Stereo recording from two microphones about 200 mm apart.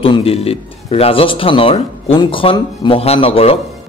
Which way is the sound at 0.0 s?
30° left (ahead or behind).